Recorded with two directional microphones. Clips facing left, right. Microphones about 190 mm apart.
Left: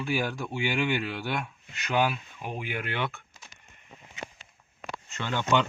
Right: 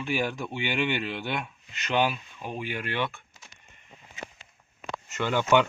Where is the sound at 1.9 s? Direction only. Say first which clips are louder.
Right 1 dB; 5° left (ahead or behind).